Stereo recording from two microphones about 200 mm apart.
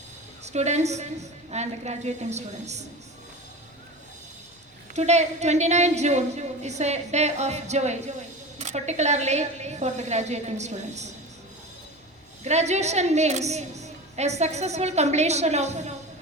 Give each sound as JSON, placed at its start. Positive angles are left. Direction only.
{"t": 0.4, "sound": "a woman's voice", "side_deg": -35}
{"t": 4.9, "sound": "a woman's voice", "side_deg": -35}
{"t": 12.4, "sound": "a woman's voice", "side_deg": -35}